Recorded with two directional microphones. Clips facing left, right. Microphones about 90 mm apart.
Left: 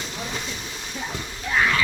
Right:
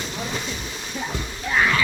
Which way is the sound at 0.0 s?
60° right (ahead or behind).